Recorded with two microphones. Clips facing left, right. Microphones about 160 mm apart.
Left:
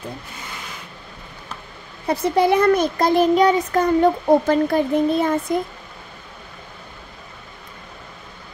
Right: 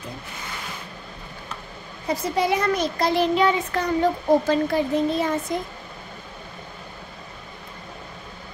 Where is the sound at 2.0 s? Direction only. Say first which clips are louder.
Left 5 dB; 65° left (ahead or behind); by 3.9 s 40° left (ahead or behind).